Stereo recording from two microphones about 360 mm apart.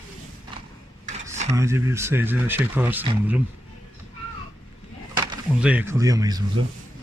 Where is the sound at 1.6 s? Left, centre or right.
Centre.